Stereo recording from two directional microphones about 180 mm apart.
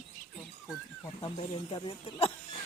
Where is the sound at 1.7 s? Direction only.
30° left (ahead or behind).